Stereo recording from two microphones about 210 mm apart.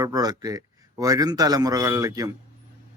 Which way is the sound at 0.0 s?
20° right (ahead or behind).